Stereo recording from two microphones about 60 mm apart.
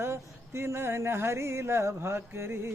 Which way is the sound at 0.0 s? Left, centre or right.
Right.